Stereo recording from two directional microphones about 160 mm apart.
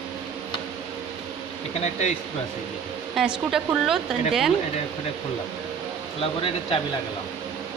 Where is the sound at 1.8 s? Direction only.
45° left (ahead or behind).